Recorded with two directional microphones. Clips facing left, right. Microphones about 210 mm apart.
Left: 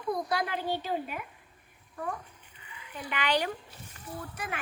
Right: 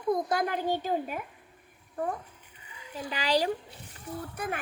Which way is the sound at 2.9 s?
30° right (ahead or behind).